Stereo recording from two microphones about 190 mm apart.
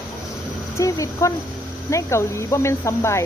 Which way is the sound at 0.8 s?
15° left (ahead or behind).